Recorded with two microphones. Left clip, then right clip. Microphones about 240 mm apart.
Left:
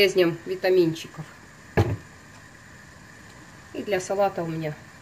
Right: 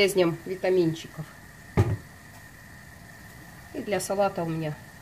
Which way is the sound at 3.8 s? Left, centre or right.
Right.